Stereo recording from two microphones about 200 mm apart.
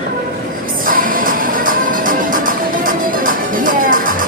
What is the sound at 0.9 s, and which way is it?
Music, 45° right (ahead or behind).